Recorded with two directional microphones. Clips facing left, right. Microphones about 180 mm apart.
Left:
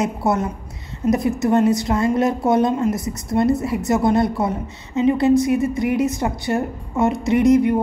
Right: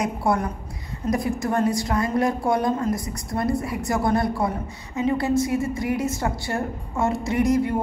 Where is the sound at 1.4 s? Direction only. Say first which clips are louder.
Left 6 dB; 20° left (ahead or behind).